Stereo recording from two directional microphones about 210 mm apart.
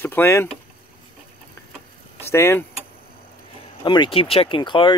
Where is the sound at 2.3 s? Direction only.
10° left (ahead or behind).